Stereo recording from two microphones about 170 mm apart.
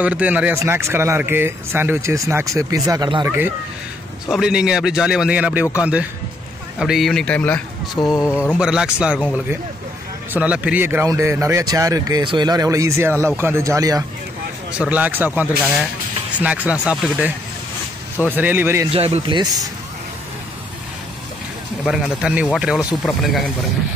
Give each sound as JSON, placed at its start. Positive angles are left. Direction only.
{"t": 0.0, "sound": "speech", "side_deg": -10}
{"t": 4.3, "sound": "speech", "side_deg": -5}
{"t": 8.5, "sound": "speech", "side_deg": -5}
{"t": 10.3, "sound": "speech", "side_deg": -5}
{"t": 14.7, "sound": "speech", "side_deg": -5}
{"t": 18.9, "sound": "speech", "side_deg": -35}
{"t": 21.8, "sound": "speech", "side_deg": -5}